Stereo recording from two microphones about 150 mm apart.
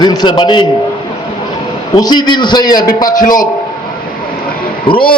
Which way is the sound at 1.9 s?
30° left (ahead or behind).